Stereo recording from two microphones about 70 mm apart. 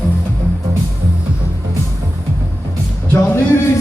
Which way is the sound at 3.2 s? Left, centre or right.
Left.